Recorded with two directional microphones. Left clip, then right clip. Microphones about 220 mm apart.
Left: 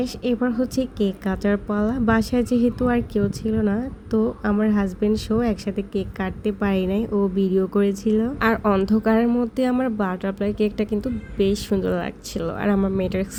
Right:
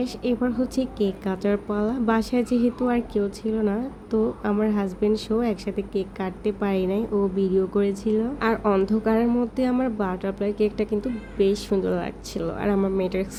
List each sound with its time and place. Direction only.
0.0 s a woman's voice: 40° left (ahead or behind)